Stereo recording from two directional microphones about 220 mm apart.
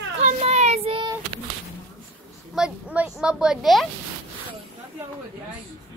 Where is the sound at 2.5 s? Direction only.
5° right (ahead or behind).